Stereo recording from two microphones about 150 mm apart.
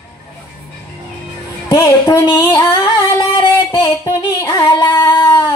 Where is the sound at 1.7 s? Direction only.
20° left (ahead or behind).